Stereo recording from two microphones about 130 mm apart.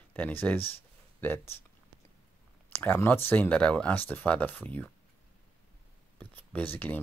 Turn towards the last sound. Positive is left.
turn(degrees=15)  # may be behind; listen again after turning